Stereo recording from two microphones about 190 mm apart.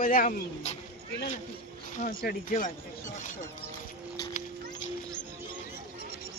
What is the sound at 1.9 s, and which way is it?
Speech, 45° left (ahead or behind).